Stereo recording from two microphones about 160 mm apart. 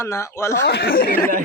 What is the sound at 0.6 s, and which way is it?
Speech, 90° left.